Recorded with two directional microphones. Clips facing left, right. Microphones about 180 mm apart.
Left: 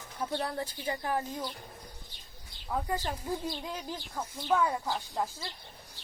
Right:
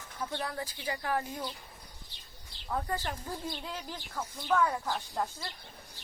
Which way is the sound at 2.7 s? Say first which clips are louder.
Left 1 dB; 15° left (ahead or behind).